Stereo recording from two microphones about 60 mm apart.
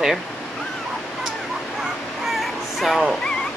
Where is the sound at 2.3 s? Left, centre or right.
Centre.